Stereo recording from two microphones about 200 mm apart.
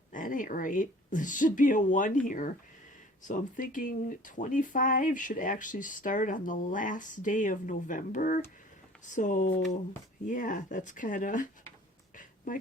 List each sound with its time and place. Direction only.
0.1 s speech: 40° left (ahead or behind)